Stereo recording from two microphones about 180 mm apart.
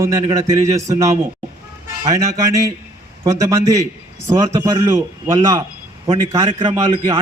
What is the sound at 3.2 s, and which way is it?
A man's voice, 20° right (ahead or behind).